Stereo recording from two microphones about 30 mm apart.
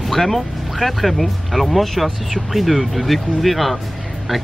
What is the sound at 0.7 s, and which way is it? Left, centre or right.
Speech, centre.